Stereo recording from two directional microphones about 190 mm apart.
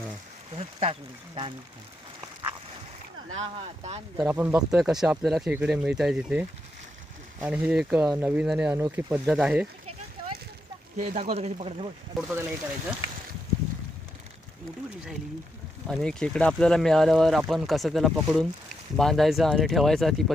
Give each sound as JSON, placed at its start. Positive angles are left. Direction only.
{"t": 0.5, "sound": "speech", "side_deg": -30}
{"t": 3.3, "sound": "speech", "side_deg": -35}
{"t": 4.2, "sound": "speech", "side_deg": -10}
{"t": 10.9, "sound": "speech", "side_deg": -40}
{"t": 12.1, "sound": "speech", "side_deg": -10}
{"t": 15.9, "sound": "speech", "side_deg": 0}